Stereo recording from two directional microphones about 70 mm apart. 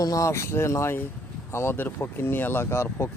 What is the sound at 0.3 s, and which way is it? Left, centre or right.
Speech, left.